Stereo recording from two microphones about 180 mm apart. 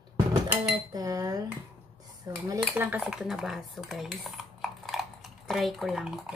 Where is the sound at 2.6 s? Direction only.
10° right (ahead or behind).